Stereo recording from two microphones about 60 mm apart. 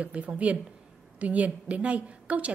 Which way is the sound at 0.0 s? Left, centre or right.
Right.